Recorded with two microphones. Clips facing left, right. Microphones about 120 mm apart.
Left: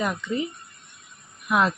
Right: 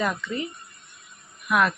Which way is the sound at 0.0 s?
15° left (ahead or behind).